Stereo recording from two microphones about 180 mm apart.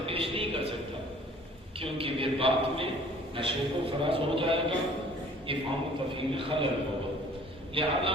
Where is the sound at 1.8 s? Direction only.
30° right (ahead or behind).